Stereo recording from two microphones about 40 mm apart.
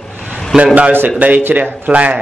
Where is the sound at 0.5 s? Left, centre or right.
Centre.